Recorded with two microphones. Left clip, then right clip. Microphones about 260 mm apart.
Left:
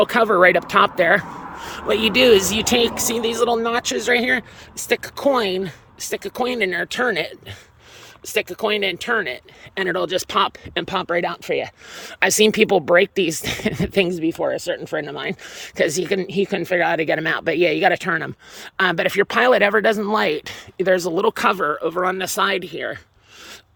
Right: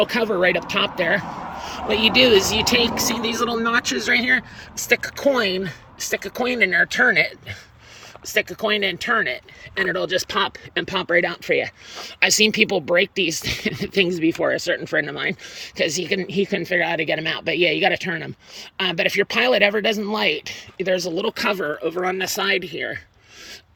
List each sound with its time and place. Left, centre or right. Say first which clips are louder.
0.0 s speech: left 5 dB; centre
3.2 s speech: left 4 dB; left
4.9 s speech: even; centre
8.4 s speech: even; centre
12.2 s speech: left 1 dB; centre
15.7 s speech: left 2 dB; centre
21.9 s speech: left 2 dB; left
22.4 s speech: even; centre